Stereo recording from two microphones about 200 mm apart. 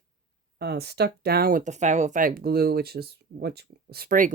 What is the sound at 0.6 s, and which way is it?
Speech, 55° right (ahead or behind).